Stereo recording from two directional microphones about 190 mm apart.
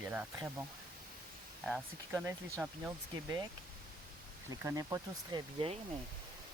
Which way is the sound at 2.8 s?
20° right (ahead or behind).